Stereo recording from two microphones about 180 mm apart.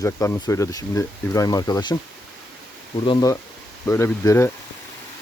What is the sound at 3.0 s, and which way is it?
Speech, 20° left (ahead or behind).